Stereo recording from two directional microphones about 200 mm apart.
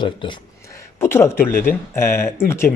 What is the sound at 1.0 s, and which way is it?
Speech, 10° left (ahead or behind).